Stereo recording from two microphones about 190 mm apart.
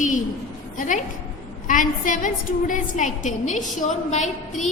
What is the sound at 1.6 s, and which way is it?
A woman's voice, 45° left (ahead or behind).